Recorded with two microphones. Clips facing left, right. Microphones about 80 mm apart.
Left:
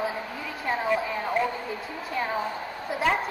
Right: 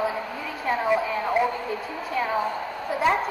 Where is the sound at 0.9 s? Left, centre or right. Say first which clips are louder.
Right 3 dB; centre.